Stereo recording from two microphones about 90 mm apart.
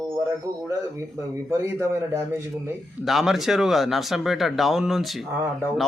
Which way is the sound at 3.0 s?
Centre (ahead or behind).